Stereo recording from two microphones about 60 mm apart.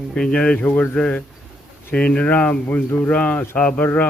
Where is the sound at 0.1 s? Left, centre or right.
Centre.